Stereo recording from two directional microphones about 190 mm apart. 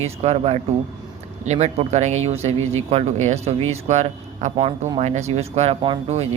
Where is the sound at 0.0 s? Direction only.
35° right (ahead or behind).